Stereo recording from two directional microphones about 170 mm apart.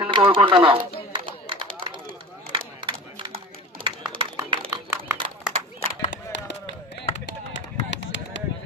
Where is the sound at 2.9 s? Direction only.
30° right (ahead or behind).